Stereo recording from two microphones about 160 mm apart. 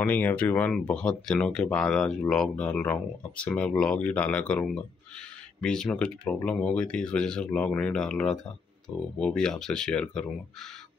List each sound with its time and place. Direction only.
0.0 s speech: 10° left (ahead or behind)